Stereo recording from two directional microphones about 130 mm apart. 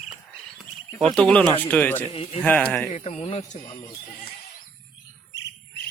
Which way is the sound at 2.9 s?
50° left (ahead or behind).